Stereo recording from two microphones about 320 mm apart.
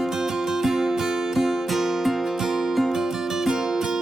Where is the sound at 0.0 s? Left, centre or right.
Centre.